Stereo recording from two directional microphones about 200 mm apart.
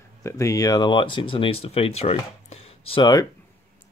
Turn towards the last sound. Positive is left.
turn(degrees=20)  # may be behind; listen again after turning